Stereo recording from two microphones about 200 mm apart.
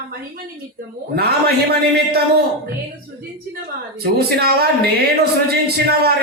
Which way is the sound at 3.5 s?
50° right (ahead or behind).